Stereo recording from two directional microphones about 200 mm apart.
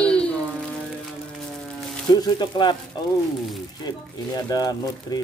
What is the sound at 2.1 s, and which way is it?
Speech, 20° left (ahead or behind).